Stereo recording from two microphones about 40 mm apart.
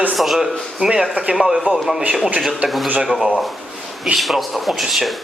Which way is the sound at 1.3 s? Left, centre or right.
Centre.